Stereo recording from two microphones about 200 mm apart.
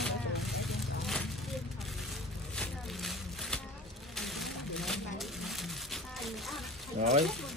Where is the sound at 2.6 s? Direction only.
5° left (ahead or behind).